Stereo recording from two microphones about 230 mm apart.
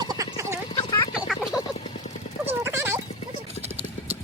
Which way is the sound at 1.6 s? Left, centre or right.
Left.